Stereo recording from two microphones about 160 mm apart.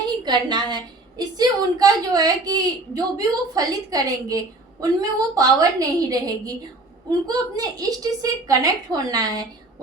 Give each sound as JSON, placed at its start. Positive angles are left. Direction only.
{"t": 0.2, "sound": "a woman's voice", "side_deg": -25}